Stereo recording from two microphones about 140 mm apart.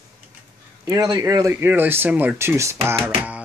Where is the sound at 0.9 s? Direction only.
30° right (ahead or behind); by 3.4 s 10° right (ahead or behind).